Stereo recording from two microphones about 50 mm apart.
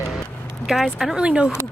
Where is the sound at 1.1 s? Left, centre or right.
Centre.